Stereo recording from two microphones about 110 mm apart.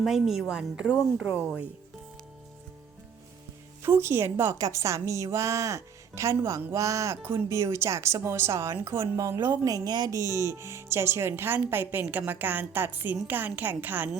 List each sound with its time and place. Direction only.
0.0 s a woman's voice: 5° right (ahead or behind)
3.8 s a woman's voice: 20° right (ahead or behind)